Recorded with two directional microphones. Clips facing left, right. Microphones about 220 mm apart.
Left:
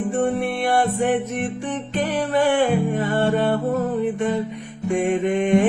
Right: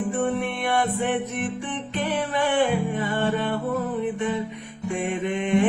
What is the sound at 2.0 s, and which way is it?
Mantra, 40° left (ahead or behind).